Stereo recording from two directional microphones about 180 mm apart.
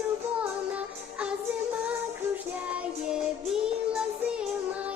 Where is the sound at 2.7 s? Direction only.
5° right (ahead or behind).